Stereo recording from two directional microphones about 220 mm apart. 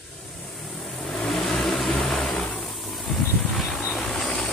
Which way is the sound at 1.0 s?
Centre (ahead or behind).